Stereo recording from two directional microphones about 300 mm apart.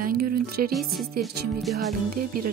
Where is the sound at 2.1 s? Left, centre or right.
Right.